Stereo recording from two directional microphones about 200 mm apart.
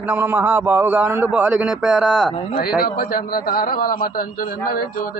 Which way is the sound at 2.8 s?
50° left (ahead or behind).